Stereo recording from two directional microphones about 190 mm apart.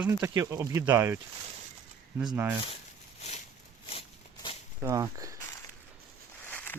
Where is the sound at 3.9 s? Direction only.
30° left (ahead or behind).